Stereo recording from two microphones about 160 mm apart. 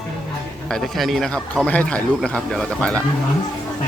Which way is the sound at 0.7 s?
Centre (ahead or behind).